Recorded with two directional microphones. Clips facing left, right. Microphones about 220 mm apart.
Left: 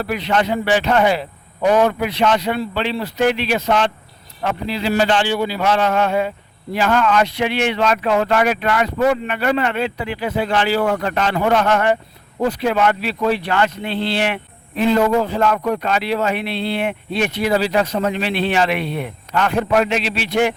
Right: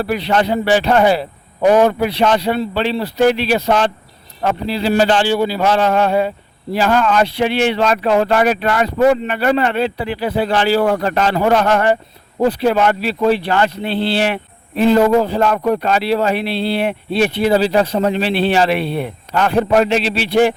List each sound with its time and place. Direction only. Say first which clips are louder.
0.0 s speech: right 3 dB; 35° right (ahead or behind)